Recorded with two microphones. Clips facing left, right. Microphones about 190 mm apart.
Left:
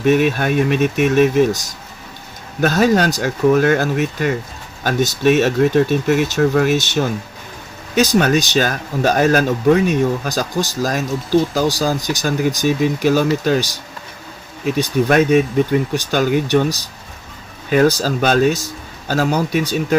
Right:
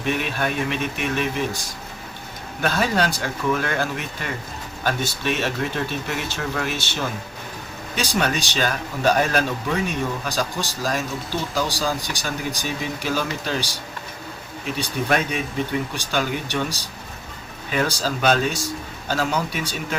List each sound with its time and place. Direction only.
0.0 s speech: 45° left (ahead or behind)
14.8 s speech: 45° left (ahead or behind)